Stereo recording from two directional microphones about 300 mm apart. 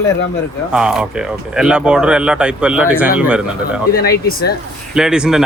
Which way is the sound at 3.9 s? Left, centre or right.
Left.